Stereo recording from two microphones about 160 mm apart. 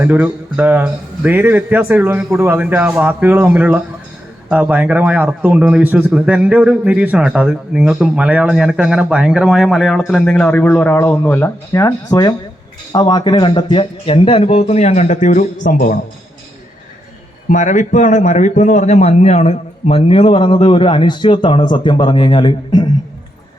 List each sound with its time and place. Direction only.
0.0 s a man's voice: 10° right (ahead or behind); by 16.0 s 55° left (ahead or behind)
17.5 s a man's voice: 50° left (ahead or behind); by 22.9 s 30° left (ahead or behind)